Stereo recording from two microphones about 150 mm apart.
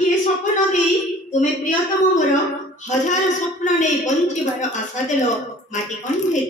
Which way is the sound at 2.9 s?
55° left (ahead or behind).